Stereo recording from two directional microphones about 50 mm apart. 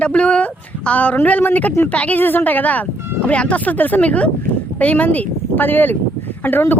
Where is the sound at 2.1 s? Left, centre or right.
Left.